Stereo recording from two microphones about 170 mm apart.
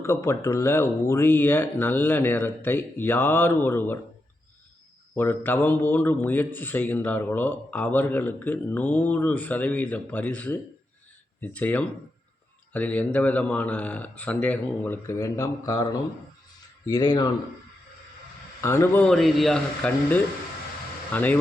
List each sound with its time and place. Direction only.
0.0 s speech: 15° left (ahead or behind)
5.1 s speech: 15° left (ahead or behind)
18.6 s speech: 15° left (ahead or behind)
19.0 s a man's voice: centre (ahead or behind)